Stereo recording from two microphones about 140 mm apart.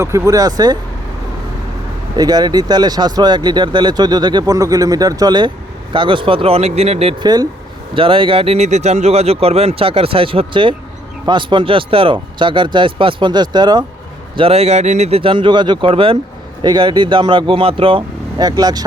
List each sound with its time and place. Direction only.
0.0 s speech: 20° right (ahead or behind)
2.1 s speech: 30° right (ahead or behind); by 7.2 s 45° right (ahead or behind)
7.2 s speech: 30° right (ahead or behind)
14.3 s speech: 45° right (ahead or behind); by 18.9 s 30° right (ahead or behind)